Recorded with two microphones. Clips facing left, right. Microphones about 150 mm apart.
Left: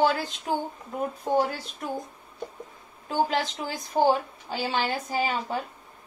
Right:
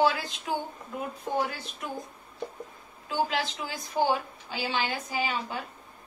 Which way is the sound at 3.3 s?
40° left (ahead or behind).